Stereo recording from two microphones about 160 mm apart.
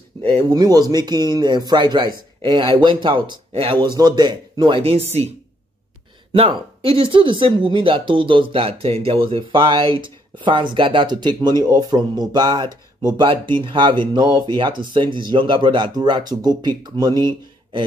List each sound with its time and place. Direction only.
0.2 s speech: 30° right (ahead or behind)
6.3 s speech: 35° right (ahead or behind)